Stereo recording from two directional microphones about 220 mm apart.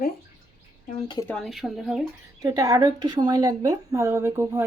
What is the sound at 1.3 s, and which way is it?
Speech, centre (ahead or behind).